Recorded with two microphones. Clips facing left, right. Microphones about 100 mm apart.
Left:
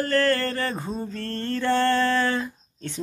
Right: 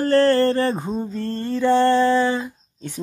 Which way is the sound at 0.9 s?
15° right (ahead or behind).